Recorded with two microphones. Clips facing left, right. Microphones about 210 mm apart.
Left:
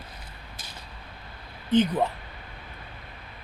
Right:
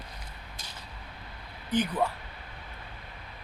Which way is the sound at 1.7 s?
25° left (ahead or behind).